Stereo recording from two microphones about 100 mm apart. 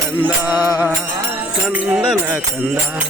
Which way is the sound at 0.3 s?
20° right (ahead or behind).